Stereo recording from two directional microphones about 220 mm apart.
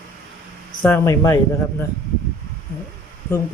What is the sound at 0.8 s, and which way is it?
Speech, 10° left (ahead or behind).